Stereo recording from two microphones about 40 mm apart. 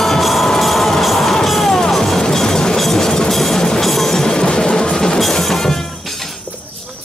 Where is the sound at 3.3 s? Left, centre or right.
Centre.